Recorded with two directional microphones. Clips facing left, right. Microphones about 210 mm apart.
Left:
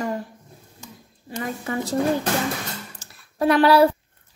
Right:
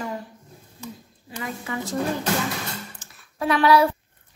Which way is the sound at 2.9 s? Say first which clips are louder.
Left 5 dB; 35° left (ahead or behind).